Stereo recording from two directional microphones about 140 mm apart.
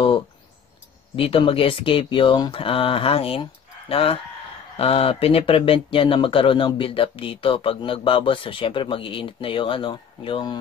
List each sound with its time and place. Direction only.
1.1 s speech: 40° left (ahead or behind)